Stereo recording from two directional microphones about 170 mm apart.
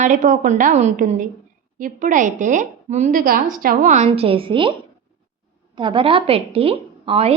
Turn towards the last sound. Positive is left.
turn(degrees=-35)  # may be behind; listen again after turning